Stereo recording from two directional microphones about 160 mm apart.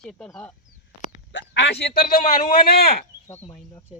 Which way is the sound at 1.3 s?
90° left.